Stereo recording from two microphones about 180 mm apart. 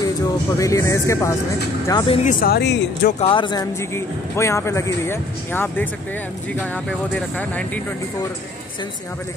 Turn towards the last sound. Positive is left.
turn(degrees=10)  # may be behind; listen again after turning